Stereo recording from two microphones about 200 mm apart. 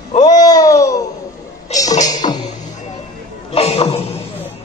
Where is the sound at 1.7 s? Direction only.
15° left (ahead or behind).